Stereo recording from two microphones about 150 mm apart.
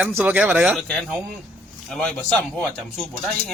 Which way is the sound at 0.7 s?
Centre (ahead or behind).